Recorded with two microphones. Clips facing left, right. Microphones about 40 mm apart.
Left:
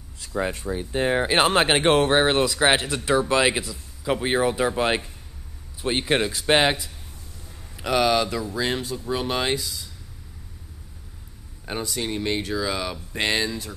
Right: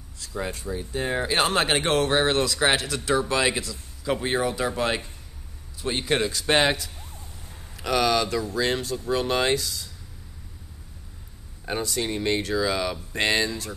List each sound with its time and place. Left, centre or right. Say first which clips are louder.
0.2 s speech: left 4 dB; left
6.4 s speech: left 2 dB; centre
11.6 s speech: right 1 dB; centre